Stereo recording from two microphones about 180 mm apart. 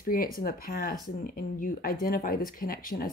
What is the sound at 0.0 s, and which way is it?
Speech, 55° left (ahead or behind).